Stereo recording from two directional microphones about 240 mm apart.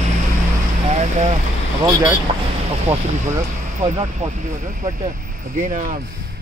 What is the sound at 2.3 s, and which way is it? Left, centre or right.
Speech, right.